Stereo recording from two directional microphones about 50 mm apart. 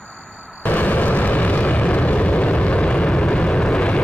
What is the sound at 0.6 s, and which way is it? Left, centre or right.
Explosion, left.